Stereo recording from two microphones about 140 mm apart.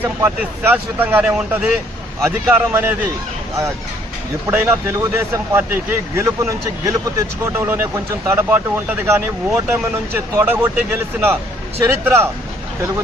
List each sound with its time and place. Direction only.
0.0 s speech: 15° right (ahead or behind)
4.4 s speech: 15° right (ahead or behind)
11.9 s speech: 15° right (ahead or behind)